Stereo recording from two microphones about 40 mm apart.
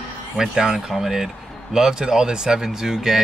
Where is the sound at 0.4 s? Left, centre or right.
Centre.